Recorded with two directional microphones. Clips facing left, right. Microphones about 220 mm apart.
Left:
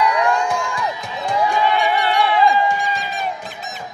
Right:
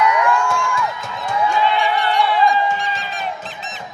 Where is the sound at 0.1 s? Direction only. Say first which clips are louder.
Even; 35° left (ahead or behind).